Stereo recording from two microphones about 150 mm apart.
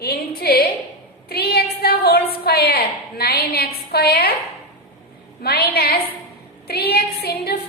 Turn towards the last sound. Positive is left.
turn(degrees=90)